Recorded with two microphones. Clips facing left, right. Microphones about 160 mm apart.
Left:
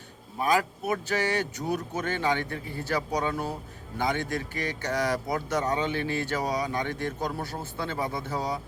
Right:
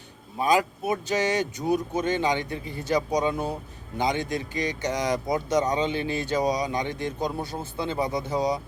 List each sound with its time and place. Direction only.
0.4 s speech: 20° right (ahead or behind)